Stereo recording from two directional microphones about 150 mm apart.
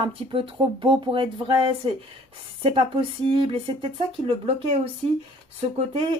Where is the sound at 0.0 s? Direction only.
35° right (ahead or behind).